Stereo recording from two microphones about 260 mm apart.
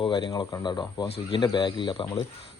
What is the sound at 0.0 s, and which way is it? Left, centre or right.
Speech, centre.